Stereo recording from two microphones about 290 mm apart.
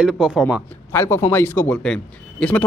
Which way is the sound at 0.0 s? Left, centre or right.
Centre.